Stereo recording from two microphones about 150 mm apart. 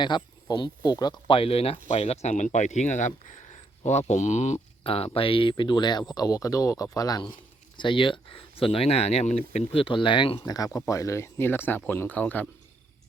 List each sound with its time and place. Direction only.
0.0 s speech: 30° left (ahead or behind); by 12.5 s 10° left (ahead or behind)